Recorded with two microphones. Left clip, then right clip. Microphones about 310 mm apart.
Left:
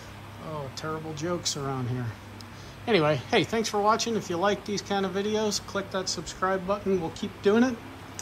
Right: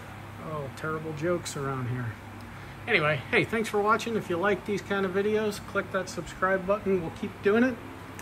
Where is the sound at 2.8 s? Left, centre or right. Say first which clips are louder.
Left 1 dB; centre.